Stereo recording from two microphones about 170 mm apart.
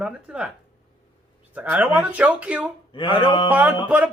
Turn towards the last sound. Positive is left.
turn(degrees=-10)  # may be behind; listen again after turning